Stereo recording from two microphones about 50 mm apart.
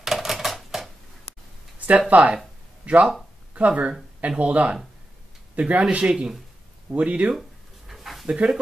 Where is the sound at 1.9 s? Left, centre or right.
Right.